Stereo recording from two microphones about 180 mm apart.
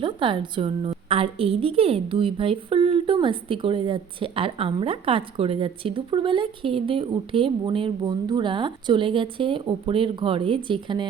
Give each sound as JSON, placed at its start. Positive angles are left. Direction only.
{"t": 0.0, "sound": "a woman's voice", "side_deg": -25}